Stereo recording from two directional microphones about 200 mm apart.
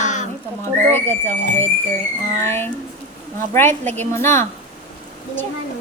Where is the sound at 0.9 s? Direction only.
10° left (ahead or behind).